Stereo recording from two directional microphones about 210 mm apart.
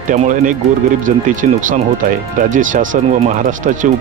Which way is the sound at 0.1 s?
35° right (ahead or behind).